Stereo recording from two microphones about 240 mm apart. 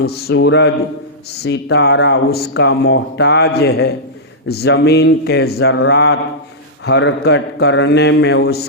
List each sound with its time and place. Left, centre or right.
0.0 s speech: left